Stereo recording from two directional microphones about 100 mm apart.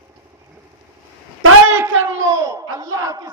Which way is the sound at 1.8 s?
25° right (ahead or behind).